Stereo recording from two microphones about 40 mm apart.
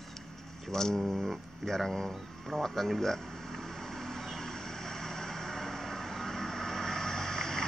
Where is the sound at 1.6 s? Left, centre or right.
Centre.